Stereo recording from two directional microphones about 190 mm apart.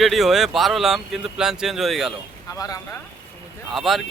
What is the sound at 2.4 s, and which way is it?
Speech, 20° left (ahead or behind).